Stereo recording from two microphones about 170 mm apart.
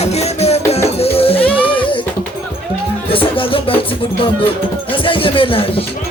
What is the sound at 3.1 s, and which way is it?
Music, 30° left (ahead or behind).